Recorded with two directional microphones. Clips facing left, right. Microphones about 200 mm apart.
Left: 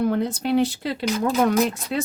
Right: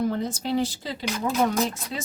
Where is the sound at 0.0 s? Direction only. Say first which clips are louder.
Left 4 dB; 60° left (ahead or behind).